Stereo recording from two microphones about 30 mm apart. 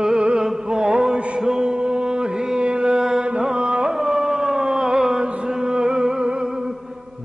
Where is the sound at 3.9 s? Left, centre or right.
Centre.